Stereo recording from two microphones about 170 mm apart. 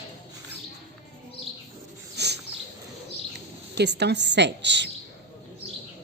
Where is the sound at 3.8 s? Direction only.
85° right.